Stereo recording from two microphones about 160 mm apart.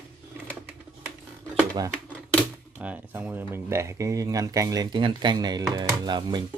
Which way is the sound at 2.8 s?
10° right (ahead or behind).